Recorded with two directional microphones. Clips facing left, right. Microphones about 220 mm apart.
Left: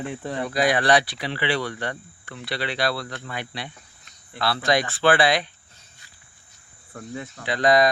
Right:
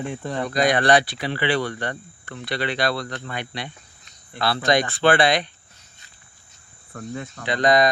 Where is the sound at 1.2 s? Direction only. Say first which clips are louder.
Right 3 dB; 45° right (ahead or behind).